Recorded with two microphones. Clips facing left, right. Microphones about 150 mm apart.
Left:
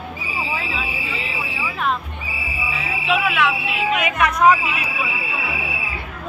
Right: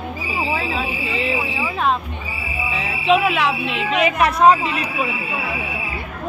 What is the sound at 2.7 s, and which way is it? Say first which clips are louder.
Music: right 5 dB; 35° right (ahead or behind).